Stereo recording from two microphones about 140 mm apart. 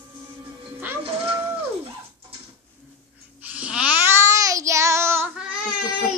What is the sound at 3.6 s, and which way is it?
Child singing, 10° right (ahead or behind).